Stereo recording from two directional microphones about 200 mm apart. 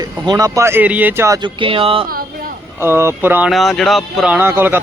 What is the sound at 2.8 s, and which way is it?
Speech, 10° right (ahead or behind).